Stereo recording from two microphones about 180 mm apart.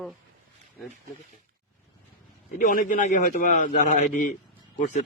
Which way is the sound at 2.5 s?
45° left (ahead or behind).